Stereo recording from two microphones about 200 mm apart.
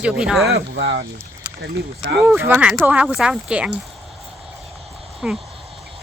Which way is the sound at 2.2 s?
10° right (ahead or behind).